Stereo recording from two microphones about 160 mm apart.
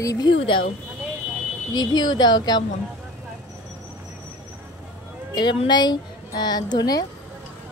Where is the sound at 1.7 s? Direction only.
25° left (ahead or behind).